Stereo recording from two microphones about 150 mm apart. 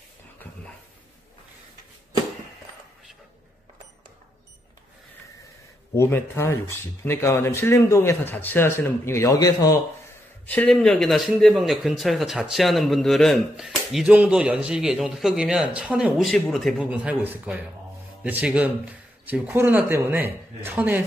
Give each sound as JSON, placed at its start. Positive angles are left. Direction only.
{"t": 5.9, "sound": "speech", "side_deg": 15}
{"t": 10.4, "sound": "speech", "side_deg": 10}